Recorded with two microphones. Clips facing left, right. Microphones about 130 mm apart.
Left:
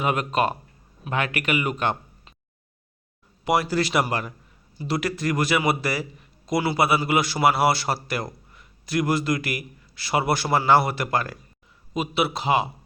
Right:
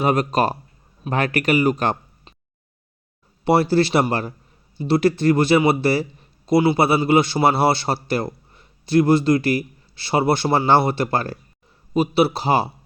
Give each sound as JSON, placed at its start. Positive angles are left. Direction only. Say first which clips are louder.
{"t": 0.0, "sound": "speech", "louder": "right 4 dB", "side_deg": -35}
{"t": 3.4, "sound": "a man's voice", "louder": "right 6 dB", "side_deg": -30}